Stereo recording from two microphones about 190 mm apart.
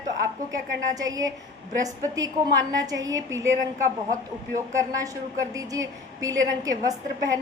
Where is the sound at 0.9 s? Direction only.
20° right (ahead or behind).